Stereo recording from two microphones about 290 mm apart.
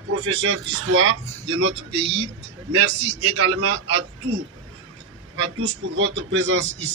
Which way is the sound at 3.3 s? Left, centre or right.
Right.